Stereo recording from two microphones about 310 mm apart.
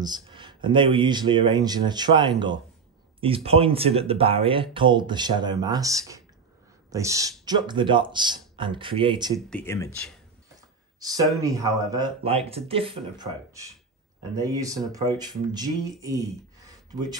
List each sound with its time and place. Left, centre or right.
0.0 s speech: centre
9.5 s speech: centre
11.0 s speech: centre